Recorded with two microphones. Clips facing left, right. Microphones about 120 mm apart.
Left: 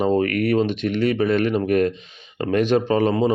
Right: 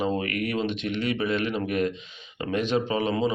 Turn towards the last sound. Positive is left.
turn(degrees=45)  # may be behind; listen again after turning